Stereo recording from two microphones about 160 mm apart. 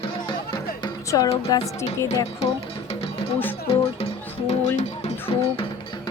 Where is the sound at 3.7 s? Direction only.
35° left (ahead or behind).